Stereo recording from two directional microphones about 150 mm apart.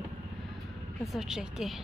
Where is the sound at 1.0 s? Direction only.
Centre (ahead or behind).